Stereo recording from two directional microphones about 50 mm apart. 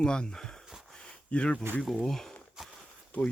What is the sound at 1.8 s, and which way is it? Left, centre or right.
Speech, centre.